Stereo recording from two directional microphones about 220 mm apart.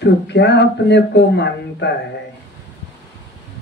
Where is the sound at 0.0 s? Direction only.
50° left (ahead or behind).